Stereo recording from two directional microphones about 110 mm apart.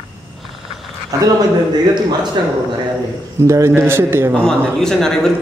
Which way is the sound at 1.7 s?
40° right (ahead or behind).